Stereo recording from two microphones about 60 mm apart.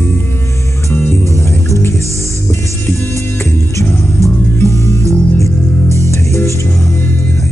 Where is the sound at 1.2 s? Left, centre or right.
Left.